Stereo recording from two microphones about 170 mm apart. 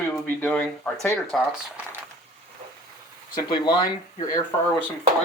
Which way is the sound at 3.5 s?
25° left (ahead or behind).